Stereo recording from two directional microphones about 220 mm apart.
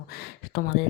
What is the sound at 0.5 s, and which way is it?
Speech, 45° left (ahead or behind).